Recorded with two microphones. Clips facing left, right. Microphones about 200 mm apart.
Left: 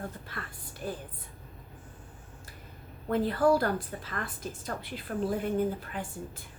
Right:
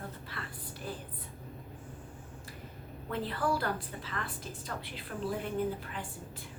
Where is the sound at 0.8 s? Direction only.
45° left (ahead or behind).